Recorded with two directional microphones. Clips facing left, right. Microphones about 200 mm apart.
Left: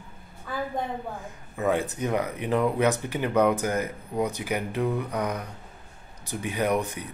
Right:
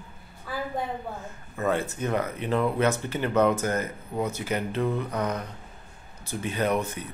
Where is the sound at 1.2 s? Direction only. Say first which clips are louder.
Left 2 dB; 15° left (ahead or behind).